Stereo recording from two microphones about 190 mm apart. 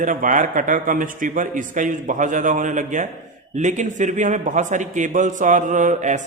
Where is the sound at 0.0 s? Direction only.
45° right (ahead or behind).